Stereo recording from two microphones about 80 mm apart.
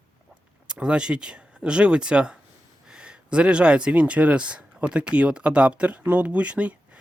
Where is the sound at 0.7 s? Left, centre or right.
Centre.